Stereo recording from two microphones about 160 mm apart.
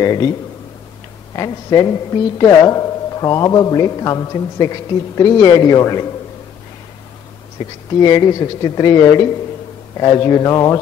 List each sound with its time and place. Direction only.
0.0 s a woman's voice: 25° left (ahead or behind)
1.3 s a woman's voice: 20° left (ahead or behind)
7.5 s a woman's voice: 25° left (ahead or behind)